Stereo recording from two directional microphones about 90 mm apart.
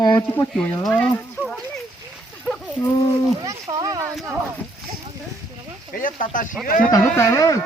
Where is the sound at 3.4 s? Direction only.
40° right (ahead or behind).